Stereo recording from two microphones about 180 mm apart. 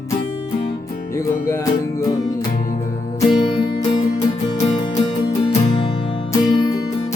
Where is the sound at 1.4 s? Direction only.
15° left (ahead or behind).